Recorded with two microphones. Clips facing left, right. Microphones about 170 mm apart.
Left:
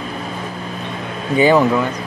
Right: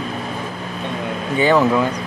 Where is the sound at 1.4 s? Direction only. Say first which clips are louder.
Left 2 dB; 10° left (ahead or behind).